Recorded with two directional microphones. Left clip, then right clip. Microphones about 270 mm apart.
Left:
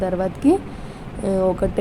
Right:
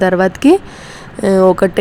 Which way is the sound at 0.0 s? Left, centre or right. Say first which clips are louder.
Right 9 dB; right.